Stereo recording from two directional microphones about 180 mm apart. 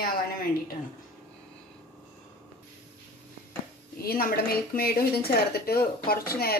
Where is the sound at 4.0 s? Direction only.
55° left (ahead or behind).